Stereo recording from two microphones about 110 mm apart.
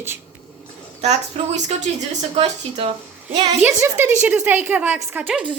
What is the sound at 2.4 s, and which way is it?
Speech, 60° right (ahead or behind).